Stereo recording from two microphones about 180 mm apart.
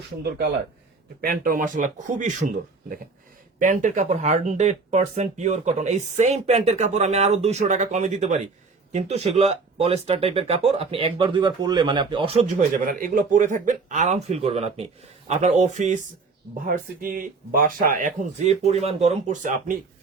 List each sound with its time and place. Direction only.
0.2 s speech: 60° right (ahead or behind); by 2.3 s 45° right (ahead or behind)
3.6 s speech: 45° right (ahead or behind); by 12.4 s 30° right (ahead or behind)
12.7 s speech: 50° right (ahead or behind)
16.6 s speech: 50° right (ahead or behind)